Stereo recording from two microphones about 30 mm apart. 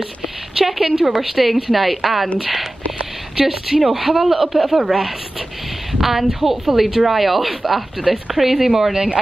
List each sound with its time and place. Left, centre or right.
0.6 s speech: centre
1.2 s a woman's voice: centre
8.9 s speech: right